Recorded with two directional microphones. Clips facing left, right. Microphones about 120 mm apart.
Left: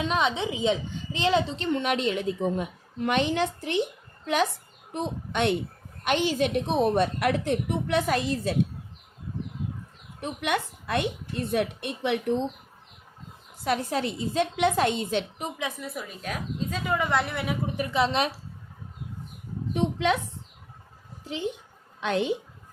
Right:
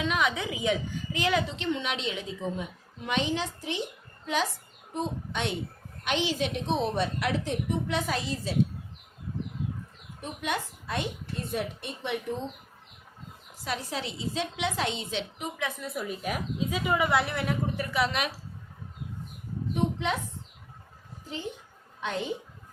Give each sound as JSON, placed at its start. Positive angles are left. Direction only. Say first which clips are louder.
{"t": 0.0, "sound": "a woman's voice", "louder": "left 2 dB", "side_deg": 30}
{"t": 1.5, "sound": "a woman's voice", "louder": "left 5 dB", "side_deg": 45}
{"t": 4.9, "sound": "a woman's voice", "louder": "left 4 dB", "side_deg": 60}
{"t": 6.1, "sound": "a woman's voice", "louder": "left 4 dB", "side_deg": 50}
{"t": 10.2, "sound": "a woman's voice", "louder": "left 4 dB", "side_deg": 70}
{"t": 13.7, "sound": "a woman's voice", "louder": "left 7 dB", "side_deg": 50}
{"t": 15.8, "sound": "a woman's voice", "louder": "right 2 dB", "side_deg": 0}
{"t": 17.7, "sound": "a woman's voice", "louder": "left 8 dB", "side_deg": 25}
{"t": 19.7, "sound": "a woman's voice", "louder": "left 4 dB", "side_deg": 70}
{"t": 22.0, "sound": "a woman's voice", "louder": "left 6 dB", "side_deg": 75}